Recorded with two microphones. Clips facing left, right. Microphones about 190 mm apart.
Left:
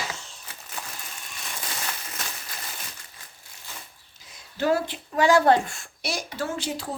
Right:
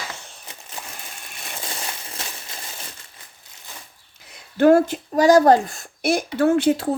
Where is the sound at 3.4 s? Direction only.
20° right (ahead or behind).